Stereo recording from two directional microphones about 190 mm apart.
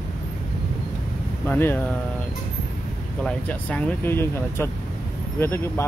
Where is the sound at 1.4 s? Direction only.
10° left (ahead or behind).